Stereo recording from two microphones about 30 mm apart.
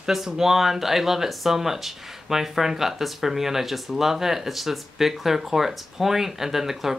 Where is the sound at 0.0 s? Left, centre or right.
Centre.